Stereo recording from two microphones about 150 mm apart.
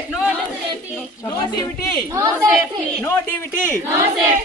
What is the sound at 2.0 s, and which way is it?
Speech, 20° right (ahead or behind).